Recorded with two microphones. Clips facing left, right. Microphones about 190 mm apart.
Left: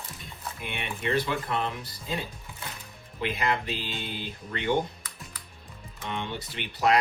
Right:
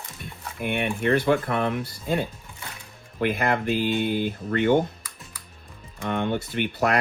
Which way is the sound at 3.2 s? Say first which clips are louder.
Right 5 dB; 55° right (ahead or behind).